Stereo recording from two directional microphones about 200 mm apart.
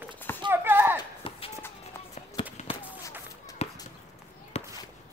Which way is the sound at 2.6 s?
35° left (ahead or behind).